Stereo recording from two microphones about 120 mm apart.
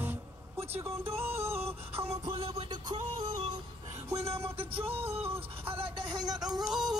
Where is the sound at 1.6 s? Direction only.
55° right (ahead or behind).